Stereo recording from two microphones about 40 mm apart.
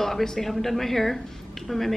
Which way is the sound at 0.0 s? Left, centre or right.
Centre.